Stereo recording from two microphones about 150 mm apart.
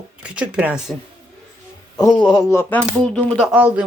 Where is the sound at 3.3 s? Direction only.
5° right (ahead or behind).